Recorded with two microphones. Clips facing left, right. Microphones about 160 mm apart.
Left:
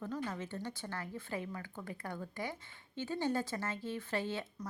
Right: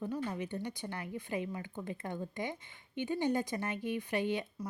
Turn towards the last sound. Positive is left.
turn(degrees=-15)  # may be behind; listen again after turning